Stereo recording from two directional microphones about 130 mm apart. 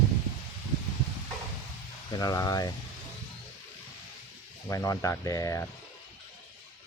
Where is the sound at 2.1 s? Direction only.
30° left (ahead or behind).